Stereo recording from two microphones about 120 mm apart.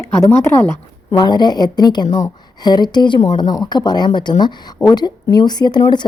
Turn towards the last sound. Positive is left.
turn(degrees=35)  # may be behind; listen again after turning